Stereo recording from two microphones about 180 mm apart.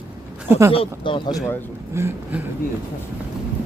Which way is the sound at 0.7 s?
30° left (ahead or behind).